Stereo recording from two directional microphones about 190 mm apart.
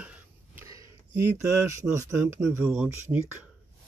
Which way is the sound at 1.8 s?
15° right (ahead or behind).